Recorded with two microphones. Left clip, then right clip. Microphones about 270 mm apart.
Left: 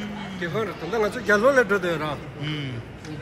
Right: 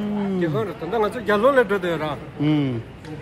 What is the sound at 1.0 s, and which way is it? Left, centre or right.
A man's voice, right.